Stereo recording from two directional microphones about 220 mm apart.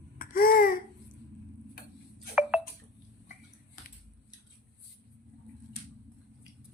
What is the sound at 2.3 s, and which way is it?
Telephone dialing, 5° right (ahead or behind).